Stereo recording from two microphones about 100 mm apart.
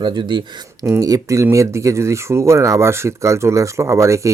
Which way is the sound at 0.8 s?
35° right (ahead or behind).